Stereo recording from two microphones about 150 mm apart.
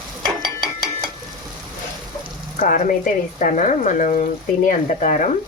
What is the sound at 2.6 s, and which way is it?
Speech, 60° left (ahead or behind).